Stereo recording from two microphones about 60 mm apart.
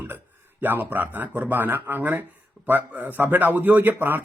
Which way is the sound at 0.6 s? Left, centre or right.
Right.